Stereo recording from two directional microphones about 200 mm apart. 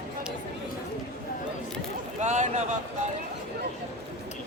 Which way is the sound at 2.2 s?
35° right (ahead or behind).